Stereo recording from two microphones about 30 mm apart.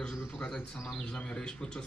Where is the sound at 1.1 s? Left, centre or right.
Left.